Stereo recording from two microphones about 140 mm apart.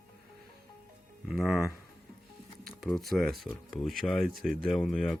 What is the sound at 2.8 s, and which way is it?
Speech, centre (ahead or behind).